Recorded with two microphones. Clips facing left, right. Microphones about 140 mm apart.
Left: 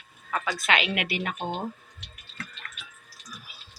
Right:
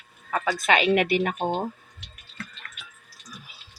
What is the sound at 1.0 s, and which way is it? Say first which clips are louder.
Speech: right 7 dB; 45° right (ahead or behind).